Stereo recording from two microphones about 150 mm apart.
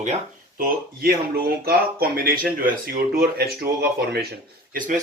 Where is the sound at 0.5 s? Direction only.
80° right.